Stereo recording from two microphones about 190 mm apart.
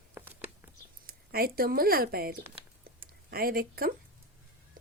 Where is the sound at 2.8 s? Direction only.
50° right (ahead or behind).